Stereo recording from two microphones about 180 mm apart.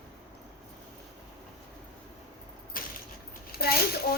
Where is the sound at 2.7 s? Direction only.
50° left (ahead or behind).